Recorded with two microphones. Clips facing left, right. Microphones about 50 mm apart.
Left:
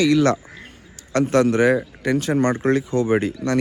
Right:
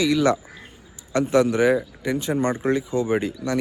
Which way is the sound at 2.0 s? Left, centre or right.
Left.